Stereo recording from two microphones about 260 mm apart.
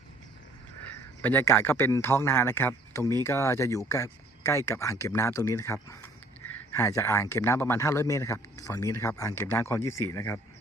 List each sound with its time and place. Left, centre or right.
1.2 s speech: centre